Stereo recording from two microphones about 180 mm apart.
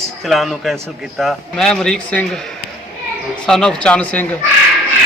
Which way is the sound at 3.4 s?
5° left (ahead or behind).